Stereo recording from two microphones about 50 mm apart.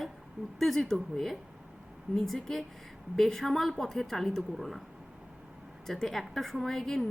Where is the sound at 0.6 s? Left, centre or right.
Centre.